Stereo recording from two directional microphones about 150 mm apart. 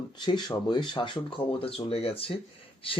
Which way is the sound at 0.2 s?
30° left (ahead or behind).